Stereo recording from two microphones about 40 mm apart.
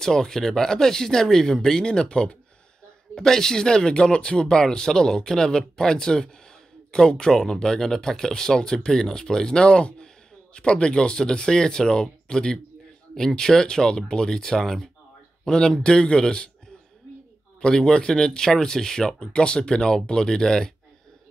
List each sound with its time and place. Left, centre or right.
0.0 s speech: centre
17.6 s speech: left